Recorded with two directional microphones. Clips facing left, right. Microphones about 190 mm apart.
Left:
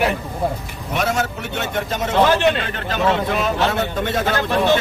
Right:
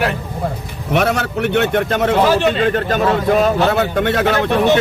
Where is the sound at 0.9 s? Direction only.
65° right (ahead or behind).